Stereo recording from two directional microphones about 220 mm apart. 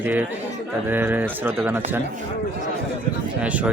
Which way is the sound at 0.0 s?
10° right (ahead or behind).